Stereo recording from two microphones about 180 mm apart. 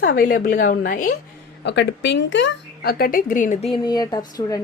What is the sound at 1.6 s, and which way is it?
Speech, 70° left (ahead or behind).